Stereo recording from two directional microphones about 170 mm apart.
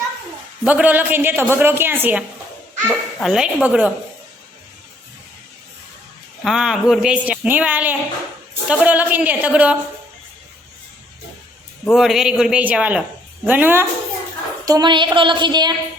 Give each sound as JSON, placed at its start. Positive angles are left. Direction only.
{"t": 0.6, "sound": "a woman's voice", "side_deg": -10}
{"t": 2.8, "sound": "speech", "side_deg": 5}
{"t": 6.4, "sound": "a woman's voice", "side_deg": -5}
{"t": 11.9, "sound": "a woman's voice", "side_deg": 0}
{"t": 14.6, "sound": "a woman's voice", "side_deg": -20}